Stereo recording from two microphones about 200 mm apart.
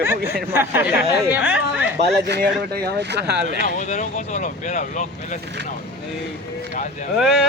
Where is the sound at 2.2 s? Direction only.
55° right (ahead or behind).